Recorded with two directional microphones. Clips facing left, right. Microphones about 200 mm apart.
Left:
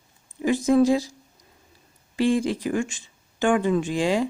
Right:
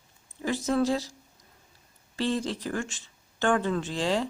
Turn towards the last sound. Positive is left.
turn(degrees=10)  # may be behind; listen again after turning